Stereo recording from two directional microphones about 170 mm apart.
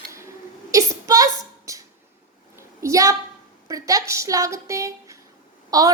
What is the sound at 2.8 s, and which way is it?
A woman's voice, 15° right (ahead or behind).